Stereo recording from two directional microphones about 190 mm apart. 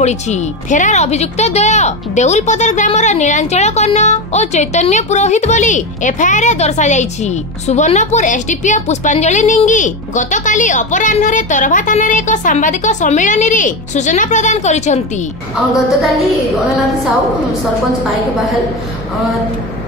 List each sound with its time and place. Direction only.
0.0 s a woman's voice: 40° left (ahead or behind)